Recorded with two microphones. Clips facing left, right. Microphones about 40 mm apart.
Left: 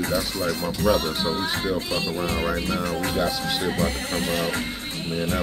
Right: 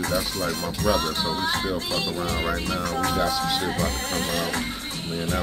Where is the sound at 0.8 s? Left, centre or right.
Left.